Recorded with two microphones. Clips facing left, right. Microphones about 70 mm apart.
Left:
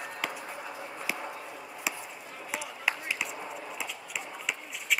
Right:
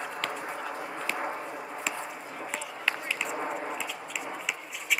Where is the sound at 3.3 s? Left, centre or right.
Right.